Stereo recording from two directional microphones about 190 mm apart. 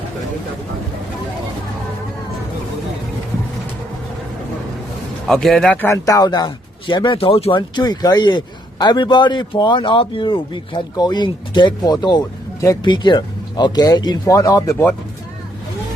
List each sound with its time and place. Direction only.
5.3 s speech: centre (ahead or behind)